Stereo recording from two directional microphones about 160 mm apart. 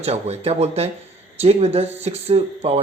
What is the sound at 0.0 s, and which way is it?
Speech, 40° right (ahead or behind).